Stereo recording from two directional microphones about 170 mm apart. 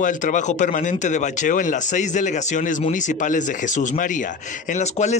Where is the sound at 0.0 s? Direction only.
50° left (ahead or behind).